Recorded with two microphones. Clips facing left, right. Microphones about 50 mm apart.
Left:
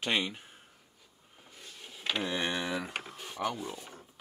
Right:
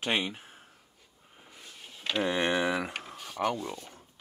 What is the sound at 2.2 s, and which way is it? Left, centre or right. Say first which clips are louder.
Speech: right 6 dB; right.